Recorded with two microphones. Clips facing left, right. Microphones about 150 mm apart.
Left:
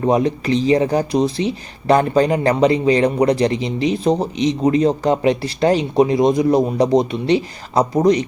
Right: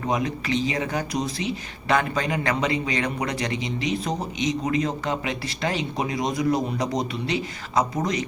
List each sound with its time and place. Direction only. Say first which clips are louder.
0.0 s speech: left 9 dB; 35° left (ahead or behind)